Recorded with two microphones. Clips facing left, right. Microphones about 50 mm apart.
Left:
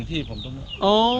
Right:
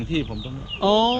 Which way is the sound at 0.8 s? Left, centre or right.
Right.